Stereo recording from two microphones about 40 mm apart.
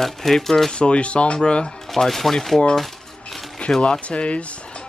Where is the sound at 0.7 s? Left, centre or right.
Left.